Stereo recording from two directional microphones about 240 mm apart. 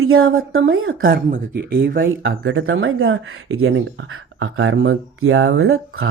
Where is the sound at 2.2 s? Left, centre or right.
Right.